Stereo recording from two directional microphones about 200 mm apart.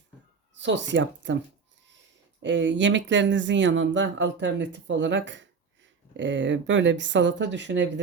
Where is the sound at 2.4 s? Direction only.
65° right (ahead or behind).